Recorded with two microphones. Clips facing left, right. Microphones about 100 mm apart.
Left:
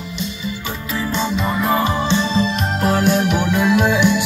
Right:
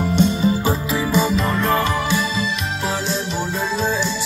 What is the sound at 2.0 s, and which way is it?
Music, 30° left (ahead or behind).